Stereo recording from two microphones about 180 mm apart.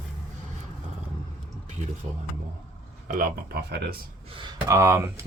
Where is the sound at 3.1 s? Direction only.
55° right (ahead or behind).